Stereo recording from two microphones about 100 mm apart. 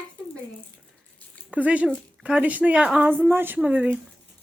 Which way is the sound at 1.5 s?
15° right (ahead or behind).